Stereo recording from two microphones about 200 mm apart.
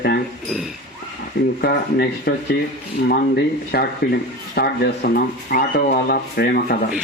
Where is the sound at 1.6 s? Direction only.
50° left (ahead or behind).